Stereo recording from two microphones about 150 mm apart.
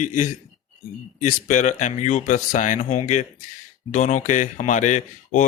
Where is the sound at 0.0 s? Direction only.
60° left (ahead or behind).